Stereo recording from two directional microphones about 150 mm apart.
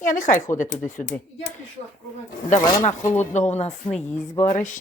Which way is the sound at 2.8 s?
50° left (ahead or behind).